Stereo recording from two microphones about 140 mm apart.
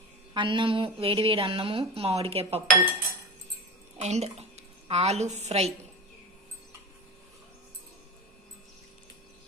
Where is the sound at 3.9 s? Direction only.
55° right (ahead or behind).